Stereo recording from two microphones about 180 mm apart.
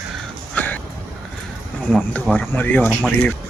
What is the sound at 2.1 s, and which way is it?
Speech, 10° left (ahead or behind).